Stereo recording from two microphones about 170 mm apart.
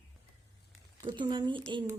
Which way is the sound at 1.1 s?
25° right (ahead or behind).